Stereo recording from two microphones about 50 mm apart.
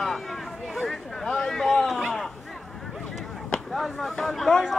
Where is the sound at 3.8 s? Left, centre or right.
Centre.